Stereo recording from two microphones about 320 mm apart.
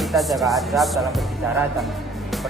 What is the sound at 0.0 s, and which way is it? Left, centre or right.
Speech, centre.